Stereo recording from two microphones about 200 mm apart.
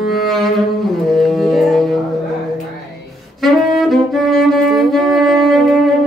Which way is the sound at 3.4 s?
Centre (ahead or behind).